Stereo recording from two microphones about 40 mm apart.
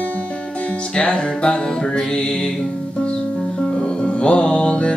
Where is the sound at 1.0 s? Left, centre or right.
Left.